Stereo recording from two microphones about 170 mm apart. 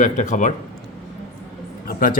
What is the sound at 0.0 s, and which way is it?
Speech, 45° left (ahead or behind).